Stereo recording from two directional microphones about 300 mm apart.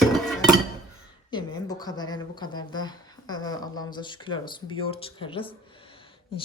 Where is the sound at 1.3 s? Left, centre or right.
Centre.